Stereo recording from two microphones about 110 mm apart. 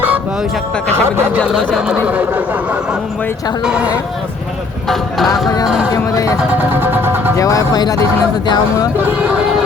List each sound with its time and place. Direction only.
0.9 s speech: 20° right (ahead or behind)
1.7 s speech: 10° right (ahead or behind)
3.6 s speech: 10° right (ahead or behind)
5.9 s speech: 30° left (ahead or behind)
6.7 s vehicle: 20° right (ahead or behind)
7.3 s speech: 30° left (ahead or behind)